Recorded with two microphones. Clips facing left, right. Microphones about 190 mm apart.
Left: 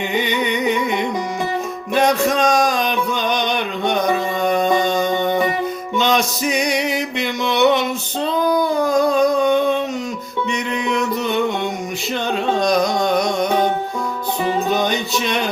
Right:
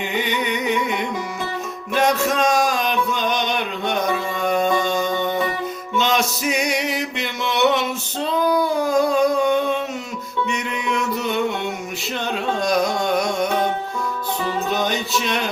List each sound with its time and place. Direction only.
0.1 s music: centre (ahead or behind)
2.0 s a sound: 5° right (ahead or behind)
5.1 s music: 20° left (ahead or behind)
6.0 s a sound: 5° right (ahead or behind)
10.5 s music: 5° right (ahead or behind)
12.5 s carnatic music: 5° right (ahead or behind)
14.7 s music: centre (ahead or behind)